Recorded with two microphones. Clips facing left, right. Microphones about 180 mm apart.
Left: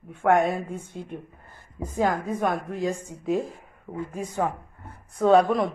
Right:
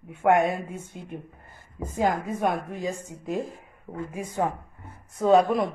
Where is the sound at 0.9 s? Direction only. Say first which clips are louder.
Left 2 dB; 5° right (ahead or behind).